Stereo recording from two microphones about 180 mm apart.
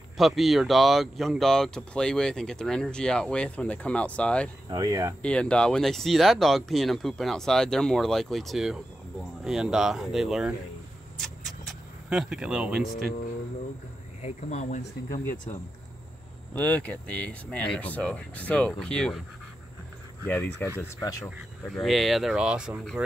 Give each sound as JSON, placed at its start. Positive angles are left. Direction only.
{"t": 0.2, "sound": "speech", "side_deg": 0}
{"t": 4.6, "sound": "speech", "side_deg": -20}
{"t": 5.2, "sound": "speech", "side_deg": 5}
{"t": 11.1, "sound": "a sound", "side_deg": 0}
{"t": 14.2, "sound": "speech", "side_deg": 40}
{"t": 16.5, "sound": "speech", "side_deg": 10}
{"t": 20.2, "sound": "speech", "side_deg": 10}